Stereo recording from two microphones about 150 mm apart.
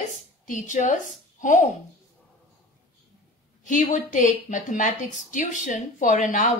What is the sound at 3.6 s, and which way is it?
A woman's voice, 55° left (ahead or behind).